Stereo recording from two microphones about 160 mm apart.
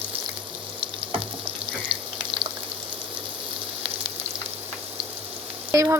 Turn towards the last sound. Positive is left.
turn(degrees=-20)  # may be behind; listen again after turning